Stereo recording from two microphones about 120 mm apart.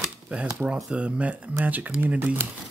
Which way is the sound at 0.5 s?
10° right (ahead or behind).